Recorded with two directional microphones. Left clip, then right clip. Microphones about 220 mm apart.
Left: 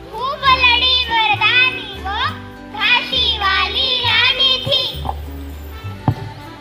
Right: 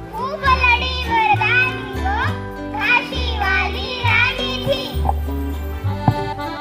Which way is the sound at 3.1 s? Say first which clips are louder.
Left 4 dB; 40° right (ahead or behind).